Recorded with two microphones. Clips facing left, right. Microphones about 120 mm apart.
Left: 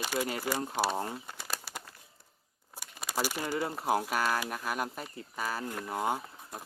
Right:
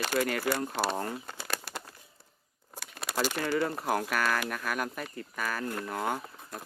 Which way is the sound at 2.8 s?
10° left (ahead or behind).